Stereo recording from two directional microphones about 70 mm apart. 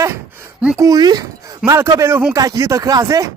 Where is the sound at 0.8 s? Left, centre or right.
Right.